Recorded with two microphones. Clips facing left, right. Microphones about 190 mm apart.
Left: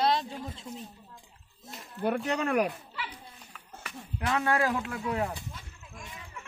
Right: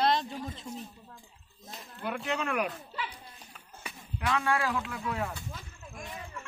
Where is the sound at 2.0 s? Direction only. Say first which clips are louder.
Left 5 dB; 40° left (ahead or behind).